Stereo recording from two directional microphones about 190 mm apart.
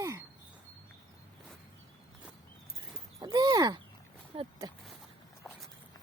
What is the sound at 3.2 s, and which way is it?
Speech, 20° right (ahead or behind).